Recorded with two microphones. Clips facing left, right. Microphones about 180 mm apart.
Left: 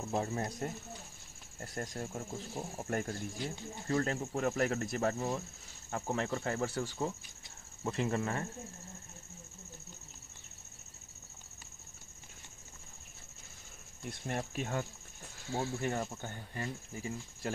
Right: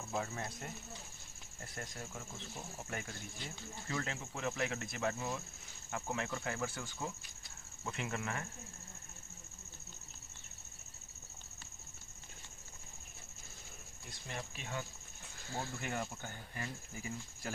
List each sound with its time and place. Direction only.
0.1 s speech: 35° left (ahead or behind)
1.8 s speech: 40° left (ahead or behind)
14.0 s speech: 50° left (ahead or behind)
15.4 s speech: 5° left (ahead or behind)
15.8 s speech: 30° left (ahead or behind)